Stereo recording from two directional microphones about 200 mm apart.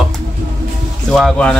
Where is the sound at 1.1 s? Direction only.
Centre (ahead or behind).